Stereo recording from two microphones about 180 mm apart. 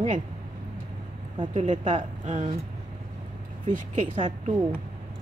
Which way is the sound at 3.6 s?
45° right (ahead or behind).